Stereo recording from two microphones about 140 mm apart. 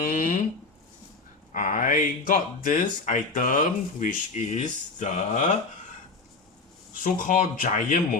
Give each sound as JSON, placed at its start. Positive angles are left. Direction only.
{"t": 0.0, "sound": "a sound", "side_deg": 75}
{"t": 1.5, "sound": "speech", "side_deg": 75}
{"t": 6.9, "sound": "speech", "side_deg": 70}